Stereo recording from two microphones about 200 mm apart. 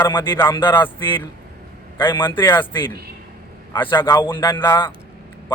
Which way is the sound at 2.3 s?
25° left (ahead or behind).